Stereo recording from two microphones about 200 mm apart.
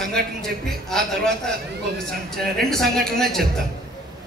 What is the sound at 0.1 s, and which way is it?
A man's voice, centre (ahead or behind).